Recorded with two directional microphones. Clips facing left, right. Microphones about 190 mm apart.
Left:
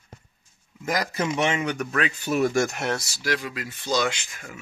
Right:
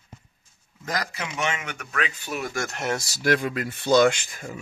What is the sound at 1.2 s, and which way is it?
Speech, 35° left (ahead or behind).